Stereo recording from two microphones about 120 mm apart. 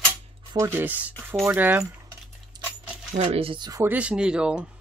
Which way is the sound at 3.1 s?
65° right (ahead or behind).